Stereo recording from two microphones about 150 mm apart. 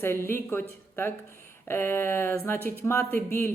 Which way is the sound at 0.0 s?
15° left (ahead or behind).